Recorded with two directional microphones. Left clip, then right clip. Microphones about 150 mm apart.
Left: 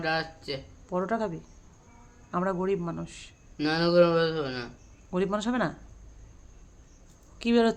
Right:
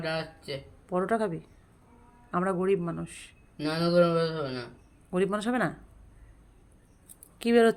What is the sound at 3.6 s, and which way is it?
Speech, 20° left (ahead or behind).